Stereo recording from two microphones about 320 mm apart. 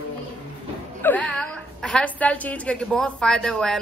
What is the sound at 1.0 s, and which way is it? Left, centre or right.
A woman's voice, centre.